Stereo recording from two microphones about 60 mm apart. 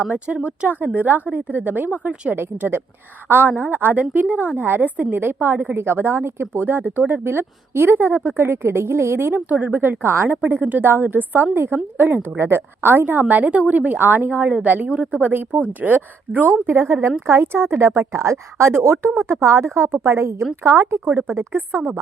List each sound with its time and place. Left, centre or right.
0.0 s a woman's voice: right
0.9 s a woman's voice: right
5.7 s speech: right
10.5 s a woman's voice: right